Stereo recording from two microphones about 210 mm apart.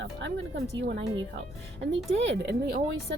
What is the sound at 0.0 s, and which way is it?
Speech, 60° right (ahead or behind).